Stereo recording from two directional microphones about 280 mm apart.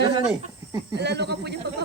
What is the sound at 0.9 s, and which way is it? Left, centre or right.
Speech, right.